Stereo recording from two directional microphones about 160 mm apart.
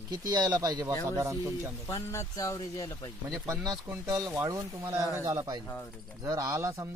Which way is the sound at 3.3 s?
20° right (ahead or behind).